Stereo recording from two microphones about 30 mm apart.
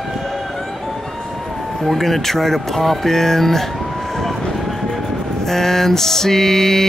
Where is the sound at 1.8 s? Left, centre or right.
Centre.